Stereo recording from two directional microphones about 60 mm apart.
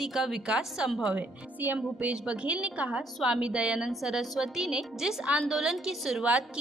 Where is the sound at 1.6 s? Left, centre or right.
Right.